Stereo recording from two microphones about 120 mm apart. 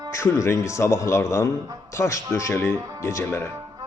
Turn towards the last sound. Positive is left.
turn(degrees=20)  # may be behind; listen again after turning